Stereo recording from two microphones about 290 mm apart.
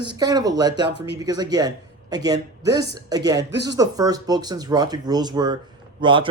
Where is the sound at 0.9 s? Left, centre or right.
Right.